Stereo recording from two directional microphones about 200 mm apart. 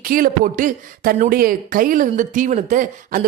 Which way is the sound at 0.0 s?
45° right (ahead or behind).